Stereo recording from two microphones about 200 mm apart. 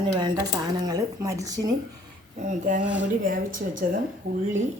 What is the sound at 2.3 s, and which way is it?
A woman's voice, 40° right (ahead or behind).